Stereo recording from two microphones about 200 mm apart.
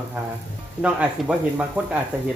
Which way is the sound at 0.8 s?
5° right (ahead or behind).